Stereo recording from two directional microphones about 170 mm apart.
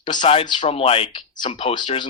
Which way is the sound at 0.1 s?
30° left (ahead or behind).